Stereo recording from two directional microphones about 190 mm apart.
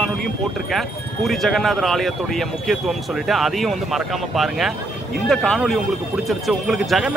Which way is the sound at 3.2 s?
Centre (ahead or behind).